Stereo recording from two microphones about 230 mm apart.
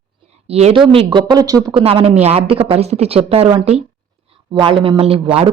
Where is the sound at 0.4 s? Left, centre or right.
Right.